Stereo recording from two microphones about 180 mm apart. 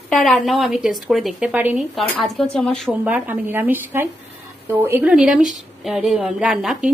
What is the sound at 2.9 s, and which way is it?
A woman's voice, 10° right (ahead or behind).